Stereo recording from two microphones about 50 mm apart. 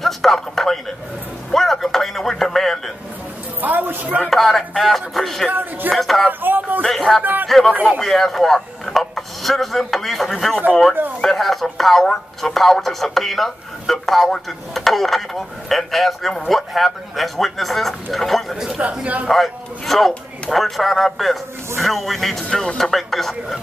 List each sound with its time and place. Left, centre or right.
0.0 s a sound: centre
3.6 s music: right
4.2 s speech: centre
5.5 s speech: right
5.9 s speech: centre
6.4 s a sound: right
6.8 s a sound: centre
7.4 s speech: centre
7.7 s speech: right
8.0 s a man's voice: centre
18.8 s speech: right
19.2 s speech: centre
22.5 s speech: centre
22.8 s speech: centre